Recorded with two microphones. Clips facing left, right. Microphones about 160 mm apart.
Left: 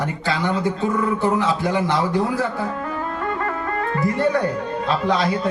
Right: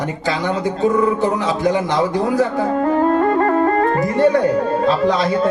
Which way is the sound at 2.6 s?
40° right (ahead or behind).